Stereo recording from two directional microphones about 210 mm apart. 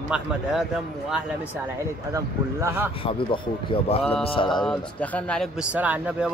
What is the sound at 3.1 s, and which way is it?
Speech, 25° left (ahead or behind).